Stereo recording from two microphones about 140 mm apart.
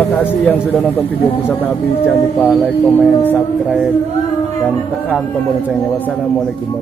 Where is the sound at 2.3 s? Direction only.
Centre (ahead or behind).